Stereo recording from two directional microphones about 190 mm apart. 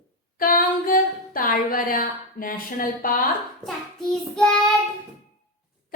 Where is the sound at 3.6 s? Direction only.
5° left (ahead or behind).